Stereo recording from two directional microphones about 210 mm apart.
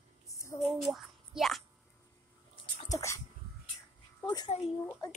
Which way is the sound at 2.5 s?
20° left (ahead or behind).